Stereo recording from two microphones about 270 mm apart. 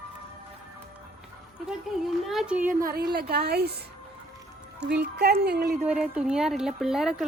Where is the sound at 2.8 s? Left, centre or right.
Right.